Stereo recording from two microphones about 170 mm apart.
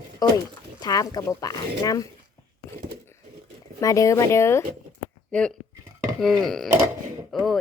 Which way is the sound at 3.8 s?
20° left (ahead or behind).